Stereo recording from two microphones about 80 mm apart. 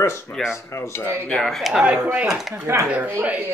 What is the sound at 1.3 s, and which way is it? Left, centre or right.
Speech, centre.